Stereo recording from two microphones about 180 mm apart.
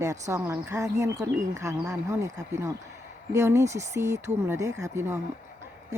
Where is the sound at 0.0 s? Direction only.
15° right (ahead or behind).